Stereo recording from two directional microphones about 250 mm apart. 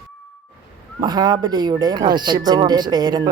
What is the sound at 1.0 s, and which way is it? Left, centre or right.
Speech, centre.